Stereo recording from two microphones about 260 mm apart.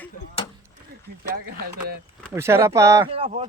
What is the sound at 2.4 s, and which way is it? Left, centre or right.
Speech, centre.